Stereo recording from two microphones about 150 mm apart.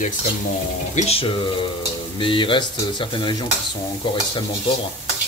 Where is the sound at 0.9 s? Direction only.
40° left (ahead or behind).